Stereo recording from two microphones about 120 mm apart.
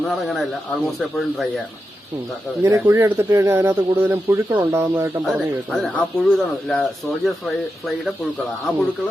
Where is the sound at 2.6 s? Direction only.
20° right (ahead or behind).